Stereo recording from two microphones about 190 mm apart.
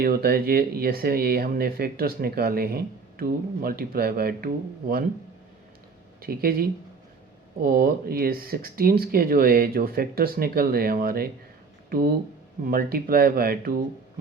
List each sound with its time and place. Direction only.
0.0 s speech: 50° right (ahead or behind)
6.2 s speech: 50° right (ahead or behind)